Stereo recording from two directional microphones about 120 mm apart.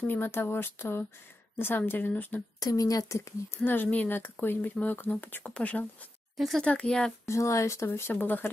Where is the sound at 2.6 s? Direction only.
30° left (ahead or behind); by 6.0 s 10° left (ahead or behind).